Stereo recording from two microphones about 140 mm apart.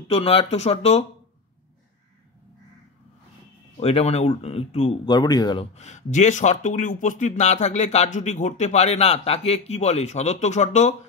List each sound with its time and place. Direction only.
0.1 s speech: 40° left (ahead or behind)
3.8 s speech: 45° left (ahead or behind)
5.0 s speech: 30° left (ahead or behind)
5.8 s speech: 55° left (ahead or behind)